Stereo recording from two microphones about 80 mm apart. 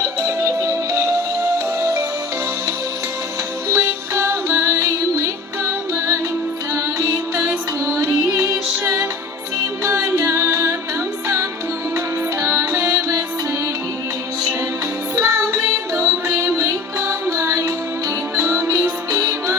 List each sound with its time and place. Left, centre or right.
0.0 s music: right
3.7 s music: right
6.7 s music: right
11.9 s music: right
15.1 s music: right